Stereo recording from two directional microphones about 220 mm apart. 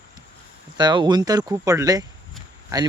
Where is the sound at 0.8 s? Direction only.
20° right (ahead or behind).